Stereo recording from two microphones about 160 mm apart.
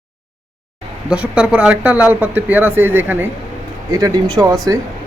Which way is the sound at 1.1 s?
5° right (ahead or behind).